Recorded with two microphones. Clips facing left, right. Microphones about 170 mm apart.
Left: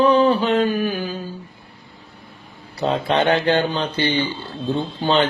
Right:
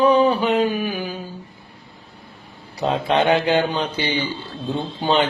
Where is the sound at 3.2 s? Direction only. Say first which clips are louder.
Even; 5° right (ahead or behind).